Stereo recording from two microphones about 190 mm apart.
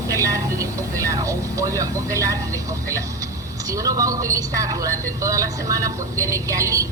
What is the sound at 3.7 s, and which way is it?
A woman's voice, 15° right (ahead or behind).